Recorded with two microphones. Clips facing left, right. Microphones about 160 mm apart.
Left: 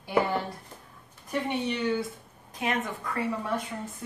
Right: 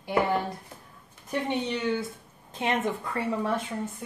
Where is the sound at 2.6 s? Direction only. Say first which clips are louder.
Right 3 dB; 25° right (ahead or behind).